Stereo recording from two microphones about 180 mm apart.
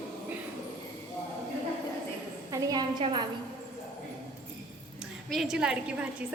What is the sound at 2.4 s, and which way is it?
Speech, 20° right (ahead or behind).